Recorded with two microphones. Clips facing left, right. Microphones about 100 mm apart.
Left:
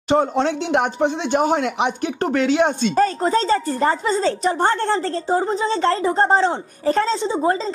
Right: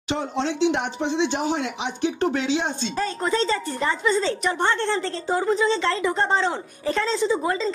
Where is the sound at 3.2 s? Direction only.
40° left (ahead or behind).